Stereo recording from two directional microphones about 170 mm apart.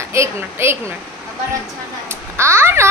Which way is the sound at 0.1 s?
15° right (ahead or behind).